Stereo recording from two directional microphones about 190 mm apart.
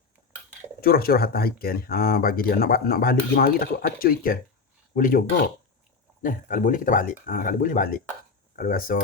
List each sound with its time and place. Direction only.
0.8 s speech: 50° left (ahead or behind)
6.2 s speech: 45° left (ahead or behind)